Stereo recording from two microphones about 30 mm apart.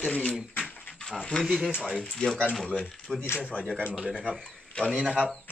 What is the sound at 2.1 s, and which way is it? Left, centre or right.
Speech, centre.